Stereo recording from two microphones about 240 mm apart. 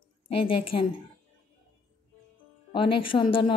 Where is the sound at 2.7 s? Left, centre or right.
Left.